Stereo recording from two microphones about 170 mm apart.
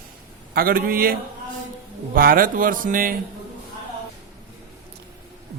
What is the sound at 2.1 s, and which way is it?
Speech, 60° right (ahead or behind).